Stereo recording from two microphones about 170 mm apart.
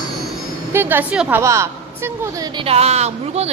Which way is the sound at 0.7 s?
10° right (ahead or behind).